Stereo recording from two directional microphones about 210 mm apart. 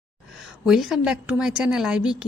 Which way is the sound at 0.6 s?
Centre (ahead or behind).